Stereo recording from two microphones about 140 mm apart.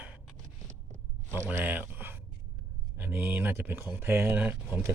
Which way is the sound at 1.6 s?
15° right (ahead or behind).